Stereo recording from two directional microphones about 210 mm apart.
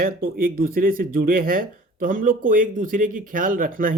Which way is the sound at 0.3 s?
45° right (ahead or behind).